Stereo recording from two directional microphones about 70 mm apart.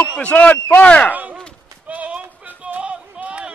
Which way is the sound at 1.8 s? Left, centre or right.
Centre.